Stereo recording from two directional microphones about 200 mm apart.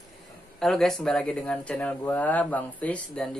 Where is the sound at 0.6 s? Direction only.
Centre (ahead or behind).